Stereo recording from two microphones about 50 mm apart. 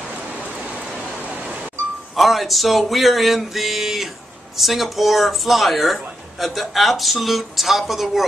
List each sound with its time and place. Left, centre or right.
0.3 s rain: right
1.2 s a sound: right
2.1 s speech: centre